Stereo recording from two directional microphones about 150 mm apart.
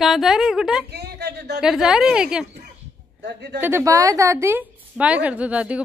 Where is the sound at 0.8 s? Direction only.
90° right.